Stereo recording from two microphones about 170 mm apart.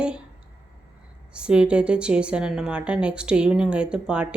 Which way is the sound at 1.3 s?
5° right (ahead or behind).